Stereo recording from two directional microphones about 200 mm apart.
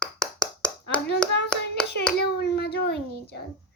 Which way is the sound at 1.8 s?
5° left (ahead or behind).